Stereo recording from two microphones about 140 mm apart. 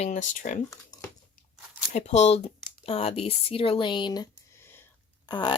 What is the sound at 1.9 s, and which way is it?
Speech, 55° left (ahead or behind).